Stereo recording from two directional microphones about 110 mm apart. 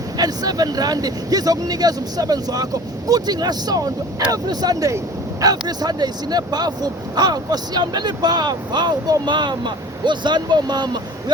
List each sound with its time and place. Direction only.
0.2 s speech: 35° right (ahead or behind)